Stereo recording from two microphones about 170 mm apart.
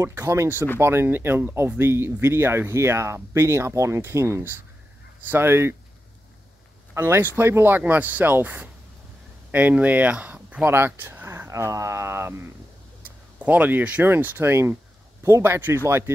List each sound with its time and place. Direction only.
0.0 s speech: 15° right (ahead or behind)
6.9 s speech: 15° right (ahead or behind)
13.4 s speech: 10° right (ahead or behind)